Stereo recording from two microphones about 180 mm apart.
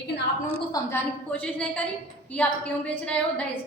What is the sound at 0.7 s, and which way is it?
A woman's voice, 10° left (ahead or behind).